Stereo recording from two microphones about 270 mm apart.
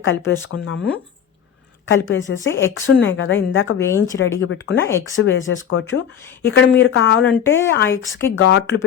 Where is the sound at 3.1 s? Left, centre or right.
Left.